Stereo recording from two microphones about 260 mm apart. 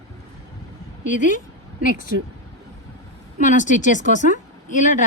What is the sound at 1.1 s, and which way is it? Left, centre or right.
Speech, left.